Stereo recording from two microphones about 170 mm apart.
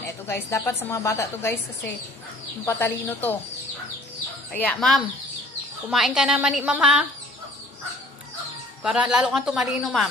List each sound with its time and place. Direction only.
0.3 s a woman's voice: 15° left (ahead or behind)
2.6 s a woman's voice: 15° left (ahead or behind)
4.5 s a woman's voice: 5° left (ahead or behind)
8.8 s a woman's voice: 5° right (ahead or behind)